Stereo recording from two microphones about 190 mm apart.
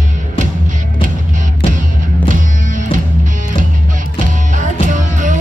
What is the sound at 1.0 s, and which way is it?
Music, 45° right (ahead or behind).